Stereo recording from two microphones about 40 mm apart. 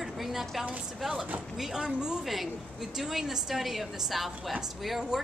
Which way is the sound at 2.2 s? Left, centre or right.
Centre.